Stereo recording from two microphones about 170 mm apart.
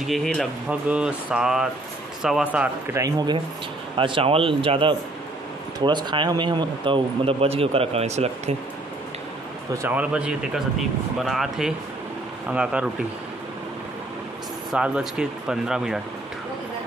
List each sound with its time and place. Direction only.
0.0 s speech: centre (ahead or behind)
3.0 s speech: 25° right (ahead or behind); by 8.5 s 40° right (ahead or behind)
9.8 s speech: 10° right (ahead or behind)
14.7 s speech: 5° right (ahead or behind)